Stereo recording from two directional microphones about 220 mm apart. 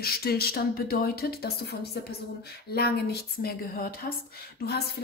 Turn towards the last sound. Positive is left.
turn(degrees=45)  # may be behind; listen again after turning